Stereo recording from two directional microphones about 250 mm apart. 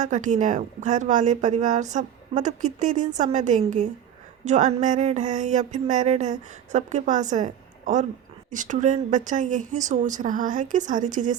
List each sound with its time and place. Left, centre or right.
0.0 s a woman's voice: right